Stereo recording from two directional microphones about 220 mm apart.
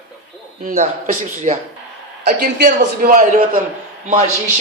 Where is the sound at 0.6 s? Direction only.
35° right (ahead or behind).